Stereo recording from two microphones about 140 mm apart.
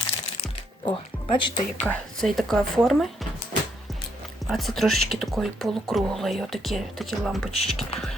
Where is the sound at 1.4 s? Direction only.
35° left (ahead or behind).